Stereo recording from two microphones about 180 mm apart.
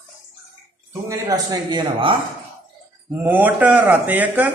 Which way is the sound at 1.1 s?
20° right (ahead or behind).